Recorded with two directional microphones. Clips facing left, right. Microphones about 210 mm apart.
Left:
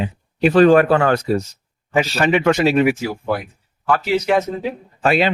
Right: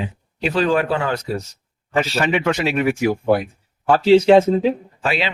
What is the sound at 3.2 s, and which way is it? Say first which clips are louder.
Speech: right 5 dB; 25° right (ahead or behind).